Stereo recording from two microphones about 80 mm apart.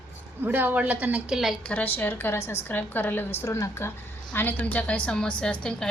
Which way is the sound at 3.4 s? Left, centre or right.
Left.